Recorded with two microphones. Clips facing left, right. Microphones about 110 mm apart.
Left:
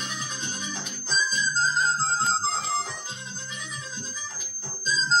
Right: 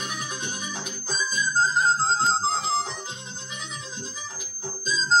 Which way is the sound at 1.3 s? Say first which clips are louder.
Right 5 dB; 50° right (ahead or behind).